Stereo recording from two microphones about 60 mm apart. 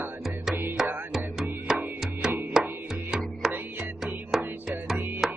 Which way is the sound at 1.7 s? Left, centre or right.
Centre.